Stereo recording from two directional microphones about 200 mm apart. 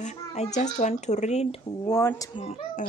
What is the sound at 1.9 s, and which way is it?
Speech, 15° left (ahead or behind).